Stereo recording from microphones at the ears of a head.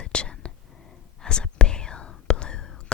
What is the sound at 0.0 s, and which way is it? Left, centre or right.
Whispering, left.